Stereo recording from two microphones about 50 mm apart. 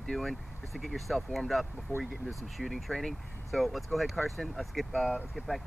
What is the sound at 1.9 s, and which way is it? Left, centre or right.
Speech, left.